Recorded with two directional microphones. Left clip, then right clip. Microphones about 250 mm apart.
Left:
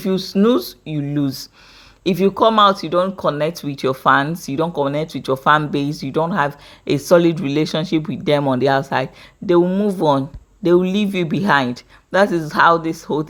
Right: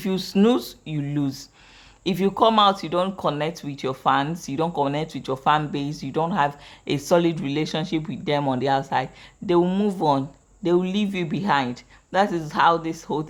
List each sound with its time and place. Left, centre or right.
0.0 s speech: centre
9.5 s speech: centre